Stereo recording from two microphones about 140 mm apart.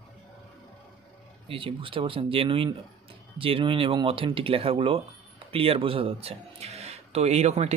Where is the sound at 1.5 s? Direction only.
40° right (ahead or behind).